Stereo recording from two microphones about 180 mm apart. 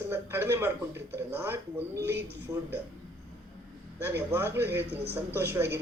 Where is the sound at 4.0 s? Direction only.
10° right (ahead or behind).